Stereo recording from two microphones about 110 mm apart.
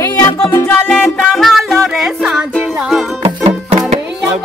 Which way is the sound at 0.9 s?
5° left (ahead or behind).